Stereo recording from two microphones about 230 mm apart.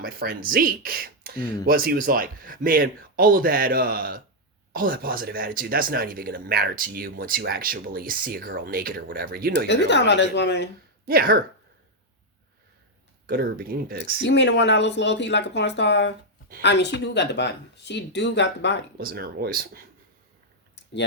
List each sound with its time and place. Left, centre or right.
0.0 s speech: right
9.6 s speech: left
11.0 s speech: right
13.2 s speech: right
14.2 s speech: left
18.9 s speech: right